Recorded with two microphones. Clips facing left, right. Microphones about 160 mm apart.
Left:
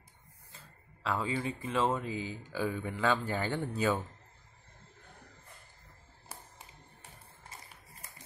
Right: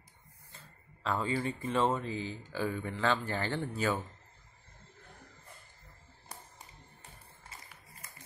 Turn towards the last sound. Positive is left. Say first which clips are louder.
# even
turn(degrees=5)  # may be behind; listen again after turning